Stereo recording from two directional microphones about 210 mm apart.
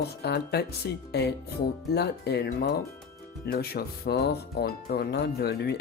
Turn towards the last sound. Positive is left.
turn(degrees=50)  # may be behind; listen again after turning